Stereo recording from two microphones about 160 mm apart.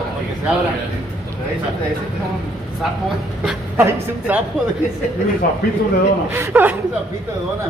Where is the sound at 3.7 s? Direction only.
15° right (ahead or behind).